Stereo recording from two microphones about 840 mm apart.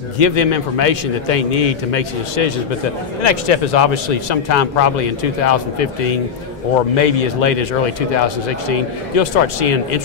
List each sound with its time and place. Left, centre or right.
0.2 s speech: left
8.6 s speech: left